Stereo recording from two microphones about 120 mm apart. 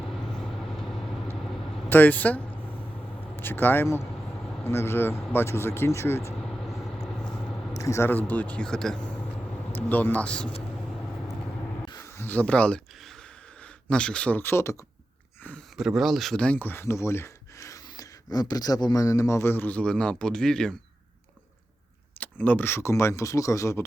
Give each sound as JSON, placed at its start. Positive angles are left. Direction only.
{"t": 1.9, "sound": "a sound", "side_deg": 15}
{"t": 4.6, "sound": "speech", "side_deg": 20}
{"t": 6.4, "sound": "vehicle", "side_deg": 5}
{"t": 7.8, "sound": "speech", "side_deg": 25}
{"t": 9.7, "sound": "speech", "side_deg": 15}
{"t": 11.9, "sound": "a sound", "side_deg": 25}
{"t": 13.8, "sound": "speech", "side_deg": 10}
{"t": 15.8, "sound": "speech", "side_deg": 0}
{"t": 22.2, "sound": "speech", "side_deg": 15}